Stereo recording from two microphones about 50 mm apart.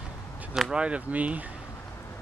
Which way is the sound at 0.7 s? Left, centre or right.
Centre.